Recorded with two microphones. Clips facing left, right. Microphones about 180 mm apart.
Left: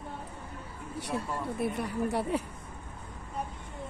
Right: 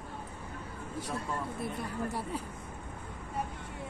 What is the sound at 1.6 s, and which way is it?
Speech, 70° left (ahead or behind).